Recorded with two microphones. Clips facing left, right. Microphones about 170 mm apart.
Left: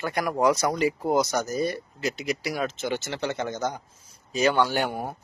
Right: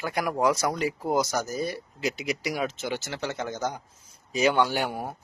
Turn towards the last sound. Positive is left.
turn(degrees=-5)  # may be behind; listen again after turning